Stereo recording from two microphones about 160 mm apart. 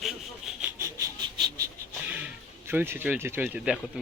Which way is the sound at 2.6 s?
15° right (ahead or behind).